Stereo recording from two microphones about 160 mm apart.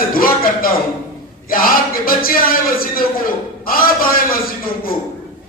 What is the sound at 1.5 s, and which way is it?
A man's voice, 65° left (ahead or behind).